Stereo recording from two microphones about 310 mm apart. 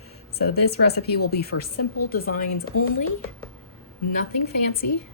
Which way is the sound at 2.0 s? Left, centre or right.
Left.